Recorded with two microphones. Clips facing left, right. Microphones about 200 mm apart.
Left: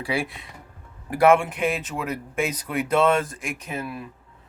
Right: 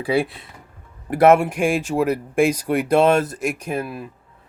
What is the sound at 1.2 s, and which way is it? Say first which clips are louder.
Speech: right 4 dB; 40° right (ahead or behind).